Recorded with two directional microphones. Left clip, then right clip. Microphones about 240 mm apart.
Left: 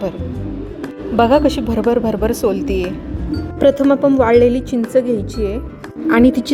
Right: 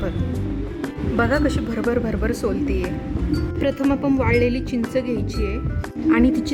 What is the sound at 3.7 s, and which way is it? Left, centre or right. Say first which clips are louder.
A woman's voice: left 8 dB; centre.